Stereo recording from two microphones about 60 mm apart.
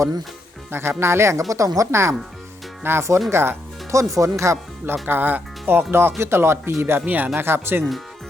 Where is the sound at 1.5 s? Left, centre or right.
Right.